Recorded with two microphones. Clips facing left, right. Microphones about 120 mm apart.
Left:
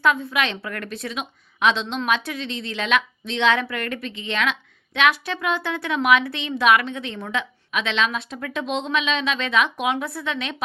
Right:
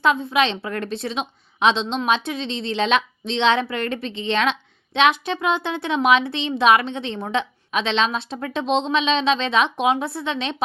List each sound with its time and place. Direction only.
0.0 s speech: 20° right (ahead or behind)